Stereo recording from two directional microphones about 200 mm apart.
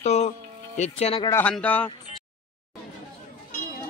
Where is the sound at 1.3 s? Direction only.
10° left (ahead or behind).